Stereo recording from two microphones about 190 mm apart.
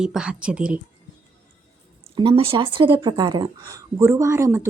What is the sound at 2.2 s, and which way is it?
A woman's voice, 30° right (ahead or behind).